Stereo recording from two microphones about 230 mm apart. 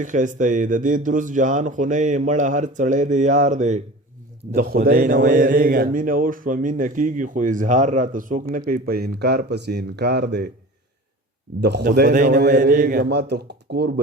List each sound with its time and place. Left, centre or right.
0.0 s a man's voice: right
11.6 s a man's voice: right